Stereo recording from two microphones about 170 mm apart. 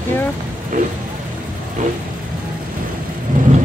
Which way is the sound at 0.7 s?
50° right (ahead or behind).